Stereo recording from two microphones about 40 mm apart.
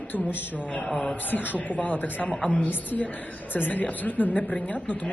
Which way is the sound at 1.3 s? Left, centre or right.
Left.